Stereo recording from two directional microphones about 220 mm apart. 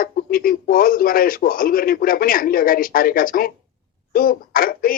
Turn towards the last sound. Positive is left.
turn(degrees=40)  # may be behind; listen again after turning